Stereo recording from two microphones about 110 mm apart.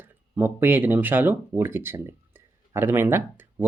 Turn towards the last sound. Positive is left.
turn(degrees=-20)  # may be behind; listen again after turning